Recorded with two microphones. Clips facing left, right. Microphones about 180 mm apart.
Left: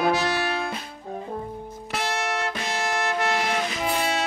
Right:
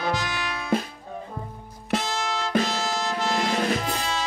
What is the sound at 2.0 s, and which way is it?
Music, 65° left (ahead or behind).